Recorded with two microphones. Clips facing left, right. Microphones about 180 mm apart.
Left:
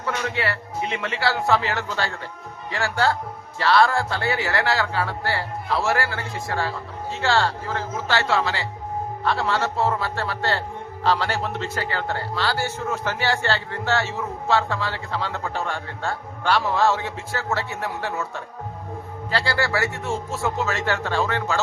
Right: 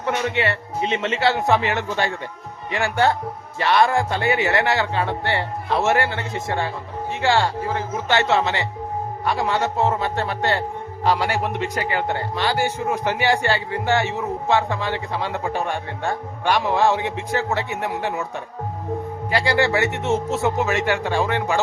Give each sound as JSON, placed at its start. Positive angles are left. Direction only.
{"t": 0.0, "sound": "a man's voice", "side_deg": -20}
{"t": 19.3, "sound": "a man's voice", "side_deg": -15}